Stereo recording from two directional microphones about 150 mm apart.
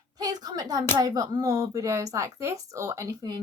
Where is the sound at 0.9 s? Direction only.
25° right (ahead or behind).